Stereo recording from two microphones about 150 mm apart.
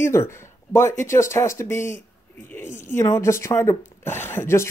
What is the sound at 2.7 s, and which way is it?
Speech, 60° left (ahead or behind).